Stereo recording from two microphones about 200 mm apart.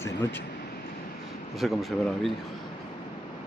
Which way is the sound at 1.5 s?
Centre (ahead or behind).